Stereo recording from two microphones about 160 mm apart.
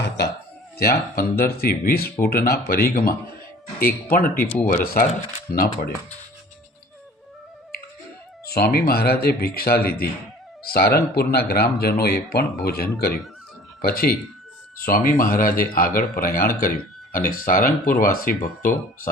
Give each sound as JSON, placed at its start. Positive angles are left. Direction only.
{"t": 0.8, "sound": "speech", "side_deg": 70}
{"t": 8.4, "sound": "speech", "side_deg": 75}